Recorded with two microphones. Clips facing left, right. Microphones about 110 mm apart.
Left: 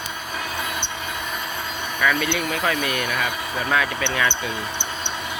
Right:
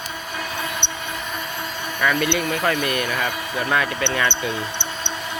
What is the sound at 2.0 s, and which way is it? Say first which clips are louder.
Speech: right 2 dB; 5° right (ahead or behind).